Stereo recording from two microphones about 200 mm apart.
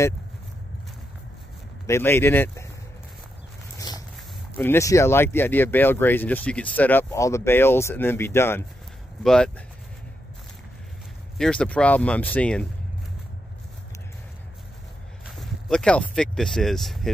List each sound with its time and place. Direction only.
1.9 s speech: 10° left (ahead or behind)
3.7 s a sound: 20° left (ahead or behind)
4.6 s speech: 15° left (ahead or behind)
11.3 s speech: 5° left (ahead or behind)
15.2 s speech: centre (ahead or behind)